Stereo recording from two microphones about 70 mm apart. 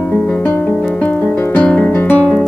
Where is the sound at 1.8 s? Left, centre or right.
Left.